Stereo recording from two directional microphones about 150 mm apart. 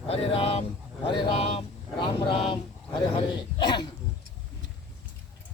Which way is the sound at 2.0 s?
35° left (ahead or behind).